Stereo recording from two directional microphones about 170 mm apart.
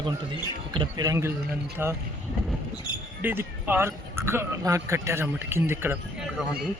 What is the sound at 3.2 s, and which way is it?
Speech, 10° right (ahead or behind).